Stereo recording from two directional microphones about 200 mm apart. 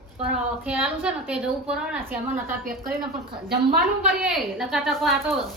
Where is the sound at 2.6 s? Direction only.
50° right (ahead or behind).